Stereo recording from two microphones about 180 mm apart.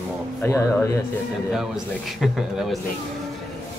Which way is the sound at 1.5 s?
Centre (ahead or behind).